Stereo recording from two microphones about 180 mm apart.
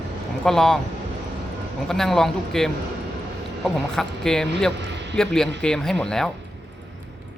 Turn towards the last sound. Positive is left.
turn(degrees=5)  # may be behind; listen again after turning